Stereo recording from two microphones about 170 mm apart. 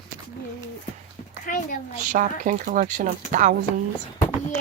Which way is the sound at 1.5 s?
50° left (ahead or behind).